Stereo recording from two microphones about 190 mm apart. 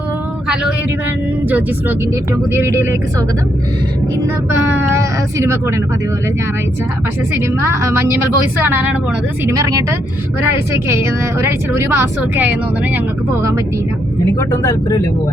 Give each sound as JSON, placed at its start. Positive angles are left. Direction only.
{"t": 1.5, "sound": "a woman's voice", "side_deg": -10}
{"t": 5.4, "sound": "a woman's voice", "side_deg": -15}
{"t": 7.3, "sound": "a woman's voice", "side_deg": -15}
{"t": 10.8, "sound": "a woman's voice", "side_deg": -15}
{"t": 14.3, "sound": "speech", "side_deg": 15}